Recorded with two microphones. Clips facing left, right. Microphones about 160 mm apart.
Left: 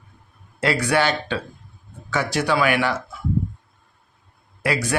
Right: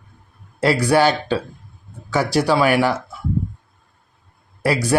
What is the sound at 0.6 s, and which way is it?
A man's voice, 35° right (ahead or behind).